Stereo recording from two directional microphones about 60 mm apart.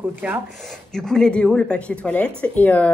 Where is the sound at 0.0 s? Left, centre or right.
Right.